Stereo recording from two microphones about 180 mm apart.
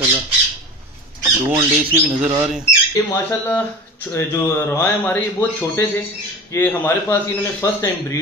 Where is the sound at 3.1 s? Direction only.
15° left (ahead or behind).